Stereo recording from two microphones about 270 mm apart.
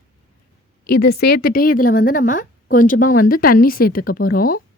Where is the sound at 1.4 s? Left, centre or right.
Left.